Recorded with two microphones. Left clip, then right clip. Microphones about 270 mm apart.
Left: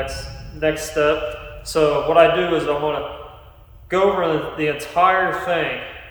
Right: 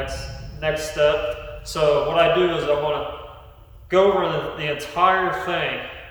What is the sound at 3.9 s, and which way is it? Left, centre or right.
A man's voice, centre.